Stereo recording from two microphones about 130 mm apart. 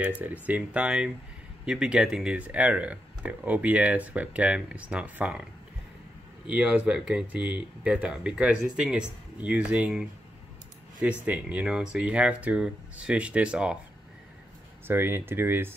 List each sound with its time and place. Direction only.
0.2 s speech: 10° right (ahead or behind)
6.5 s speech: 10° right (ahead or behind)
14.9 s speech: 15° right (ahead or behind)